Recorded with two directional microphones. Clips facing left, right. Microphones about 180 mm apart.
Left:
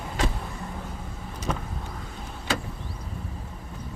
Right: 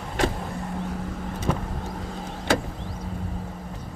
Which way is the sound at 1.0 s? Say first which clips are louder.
Right 7 dB; 65° right (ahead or behind).